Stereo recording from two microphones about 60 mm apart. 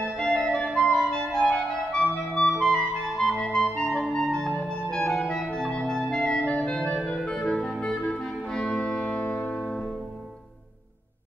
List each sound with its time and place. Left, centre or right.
0.2 s organ: centre
0.7 s clarinet: centre
4.0 s organ: centre
4.6 s music: centre
5.3 s organ: centre
7.1 s clarinet: centre
7.8 s music: centre
9.5 s music: centre